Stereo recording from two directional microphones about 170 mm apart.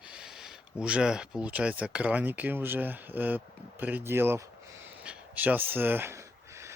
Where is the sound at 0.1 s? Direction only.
5° right (ahead or behind).